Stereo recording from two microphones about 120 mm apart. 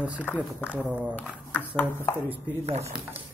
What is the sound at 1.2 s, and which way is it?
Speech, 10° left (ahead or behind).